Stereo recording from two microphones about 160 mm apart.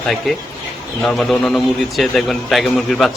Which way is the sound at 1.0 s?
Centre (ahead or behind).